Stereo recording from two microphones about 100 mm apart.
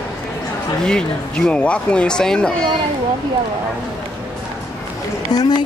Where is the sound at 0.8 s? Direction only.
10° left (ahead or behind).